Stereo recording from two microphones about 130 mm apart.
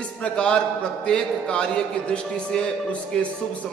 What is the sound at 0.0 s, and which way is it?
A man's voice, 10° left (ahead or behind).